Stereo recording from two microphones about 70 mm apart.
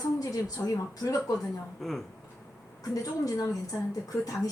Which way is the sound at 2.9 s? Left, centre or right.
Left.